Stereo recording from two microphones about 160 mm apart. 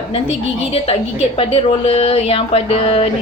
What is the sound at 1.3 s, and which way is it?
Speech, 35° left (ahead or behind).